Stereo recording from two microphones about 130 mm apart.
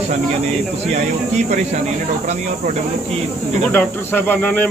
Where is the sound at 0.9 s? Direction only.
60° right (ahead or behind).